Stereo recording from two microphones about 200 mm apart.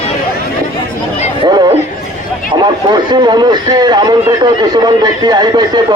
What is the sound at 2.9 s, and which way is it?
A man's voice, 20° right (ahead or behind).